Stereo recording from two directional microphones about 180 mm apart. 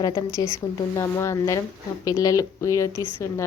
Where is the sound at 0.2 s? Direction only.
15° left (ahead or behind).